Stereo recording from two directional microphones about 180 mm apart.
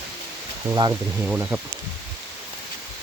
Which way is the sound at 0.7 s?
20° right (ahead or behind).